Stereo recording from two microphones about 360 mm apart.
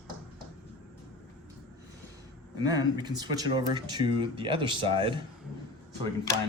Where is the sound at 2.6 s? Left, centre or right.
Centre.